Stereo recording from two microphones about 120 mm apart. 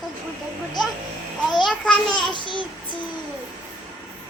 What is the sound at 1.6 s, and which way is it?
Babbling, 5° left (ahead or behind).